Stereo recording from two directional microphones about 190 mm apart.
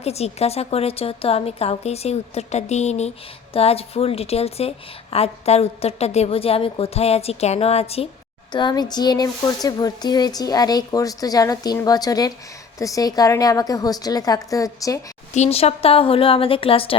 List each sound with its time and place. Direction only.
0.0 s a woman's voice: 35° left (ahead or behind); by 15.0 s 15° left (ahead or behind)
15.4 s speech: 30° left (ahead or behind)